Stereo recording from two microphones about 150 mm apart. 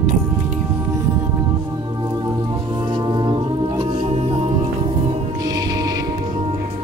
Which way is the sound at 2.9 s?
30° right (ahead or behind).